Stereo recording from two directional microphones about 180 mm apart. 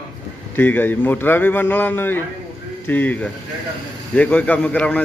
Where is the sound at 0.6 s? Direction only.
10° left (ahead or behind).